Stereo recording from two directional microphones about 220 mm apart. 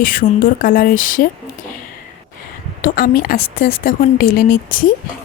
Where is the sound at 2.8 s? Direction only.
40° left (ahead or behind).